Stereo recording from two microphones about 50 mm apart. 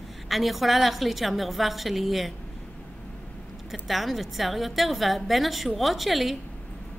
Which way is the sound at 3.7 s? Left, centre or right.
Centre.